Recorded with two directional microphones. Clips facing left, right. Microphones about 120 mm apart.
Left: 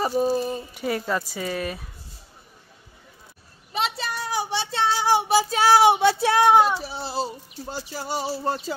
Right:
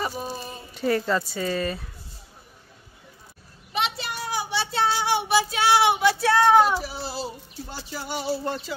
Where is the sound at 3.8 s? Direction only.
35° left (ahead or behind).